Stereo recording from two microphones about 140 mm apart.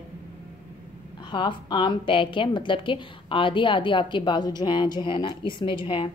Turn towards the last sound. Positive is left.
turn(degrees=35)  # may be behind; listen again after turning